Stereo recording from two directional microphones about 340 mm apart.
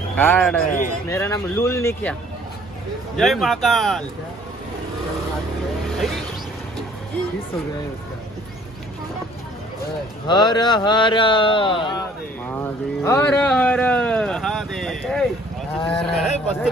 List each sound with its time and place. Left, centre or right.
0.2 s speech: centre
3.2 s speech: centre
10.2 s speech: centre
15.8 s speech: centre
16.0 s speech: centre